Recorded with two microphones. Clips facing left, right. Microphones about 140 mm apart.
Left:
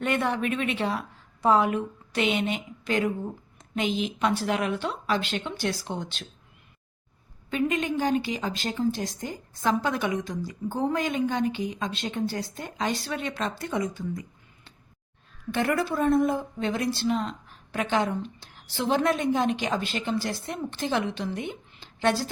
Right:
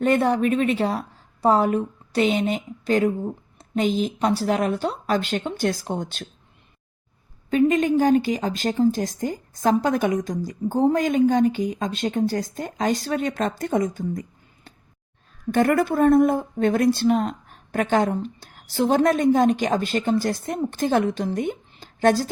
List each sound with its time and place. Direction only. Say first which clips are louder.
0.0 s a woman's voice: right 7 dB; 35° right (ahead or behind)
7.5 s speech: right 8 dB; 45° right (ahead or behind)